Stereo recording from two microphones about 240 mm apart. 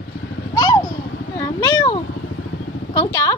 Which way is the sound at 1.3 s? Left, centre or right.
Centre.